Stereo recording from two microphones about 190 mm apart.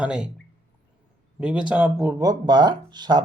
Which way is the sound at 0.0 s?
5° right (ahead or behind).